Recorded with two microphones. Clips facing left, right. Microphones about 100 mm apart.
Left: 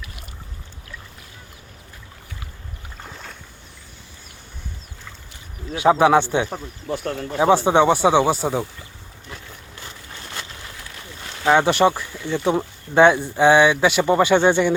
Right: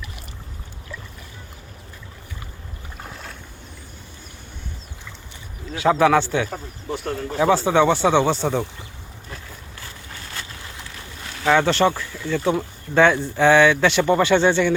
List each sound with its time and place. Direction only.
3.0 s boat: centre (ahead or behind)
5.7 s a man's voice: 20° left (ahead or behind)
6.5 s speech: 50° left (ahead or behind)
7.5 s speech: 20° left (ahead or behind)
11.4 s speech: 20° left (ahead or behind)